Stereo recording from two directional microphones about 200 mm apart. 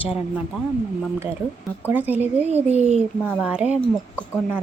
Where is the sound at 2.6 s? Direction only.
35° right (ahead or behind).